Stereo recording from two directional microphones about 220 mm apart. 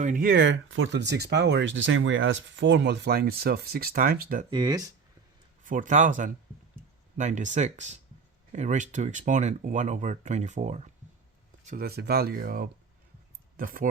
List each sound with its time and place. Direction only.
0.0 s speech: 40° right (ahead or behind)
4.4 s speech: 20° right (ahead or behind)
5.6 s speech: 35° right (ahead or behind)